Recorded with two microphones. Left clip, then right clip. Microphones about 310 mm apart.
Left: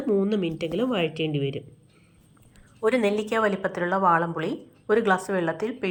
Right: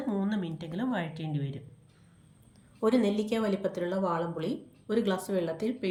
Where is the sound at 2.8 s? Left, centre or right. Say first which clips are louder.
Left 5 dB; centre.